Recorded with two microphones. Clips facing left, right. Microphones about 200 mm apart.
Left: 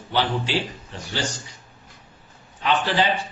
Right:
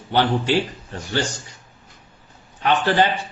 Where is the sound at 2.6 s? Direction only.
55° right (ahead or behind).